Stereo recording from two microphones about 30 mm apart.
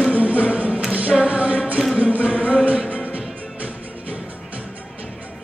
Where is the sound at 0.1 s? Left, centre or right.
Right.